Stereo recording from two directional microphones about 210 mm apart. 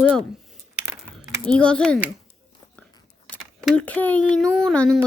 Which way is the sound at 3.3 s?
5° left (ahead or behind).